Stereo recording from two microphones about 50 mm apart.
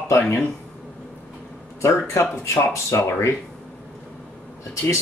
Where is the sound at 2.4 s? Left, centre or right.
Left.